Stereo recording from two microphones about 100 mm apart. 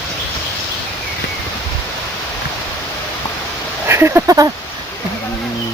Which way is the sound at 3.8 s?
25° right (ahead or behind).